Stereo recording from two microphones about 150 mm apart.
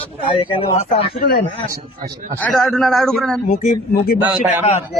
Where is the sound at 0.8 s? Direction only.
45° left (ahead or behind).